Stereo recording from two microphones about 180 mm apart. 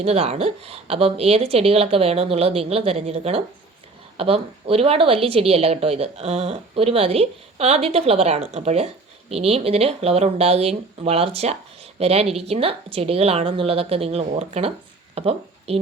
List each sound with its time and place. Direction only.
0.0 s speech: 35° right (ahead or behind)